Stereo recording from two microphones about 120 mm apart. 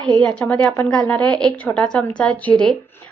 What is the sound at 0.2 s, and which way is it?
A woman's voice, 10° left (ahead or behind).